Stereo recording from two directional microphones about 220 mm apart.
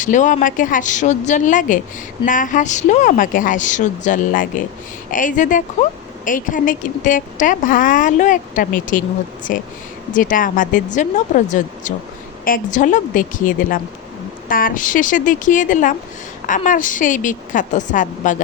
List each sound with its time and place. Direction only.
0.0 s a woman's voice: 35° left (ahead or behind)